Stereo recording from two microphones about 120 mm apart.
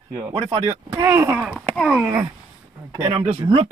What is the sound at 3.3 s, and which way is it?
Speech, 45° right (ahead or behind).